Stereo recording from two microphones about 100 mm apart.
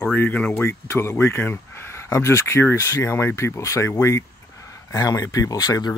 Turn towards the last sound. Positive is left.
turn(degrees=40)  # may be behind; listen again after turning